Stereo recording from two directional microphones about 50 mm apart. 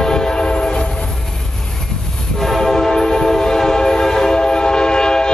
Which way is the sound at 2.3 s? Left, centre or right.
Centre.